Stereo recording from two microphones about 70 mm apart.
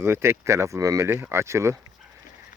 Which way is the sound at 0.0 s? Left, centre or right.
Right.